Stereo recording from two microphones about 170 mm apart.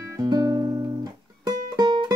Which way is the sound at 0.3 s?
25° right (ahead or behind).